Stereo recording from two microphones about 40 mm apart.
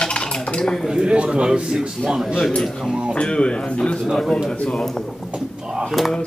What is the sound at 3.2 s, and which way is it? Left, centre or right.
Speech, left.